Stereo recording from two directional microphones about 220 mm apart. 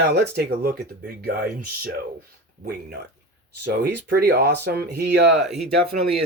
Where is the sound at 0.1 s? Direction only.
45° right (ahead or behind).